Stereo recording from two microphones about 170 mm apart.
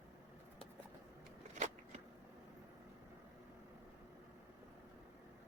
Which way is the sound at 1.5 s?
45° right (ahead or behind).